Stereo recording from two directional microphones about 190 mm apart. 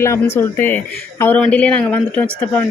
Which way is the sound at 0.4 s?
15° left (ahead or behind).